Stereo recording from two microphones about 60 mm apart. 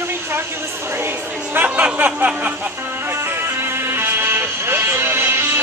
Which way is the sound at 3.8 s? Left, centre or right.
Right.